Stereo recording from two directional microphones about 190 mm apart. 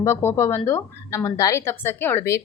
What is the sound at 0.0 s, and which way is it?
A woman's voice, 10° left (ahead or behind).